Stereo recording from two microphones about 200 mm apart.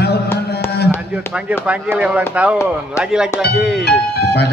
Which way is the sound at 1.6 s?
5° right (ahead or behind).